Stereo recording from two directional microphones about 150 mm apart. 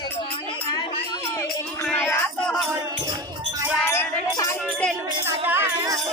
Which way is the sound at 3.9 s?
20° left (ahead or behind).